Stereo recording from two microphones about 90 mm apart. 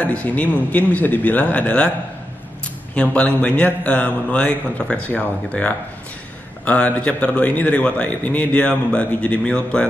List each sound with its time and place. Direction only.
0.0 s a man's voice: 15° left (ahead or behind)
2.9 s a man's voice: 15° left (ahead or behind)